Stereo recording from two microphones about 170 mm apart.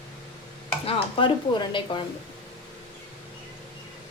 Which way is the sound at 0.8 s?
35° left (ahead or behind).